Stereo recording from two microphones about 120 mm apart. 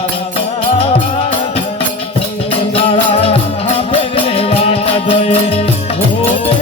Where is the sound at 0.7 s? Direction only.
50° left (ahead or behind).